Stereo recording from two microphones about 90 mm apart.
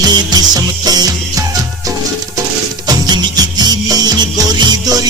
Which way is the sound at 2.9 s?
50° right (ahead or behind).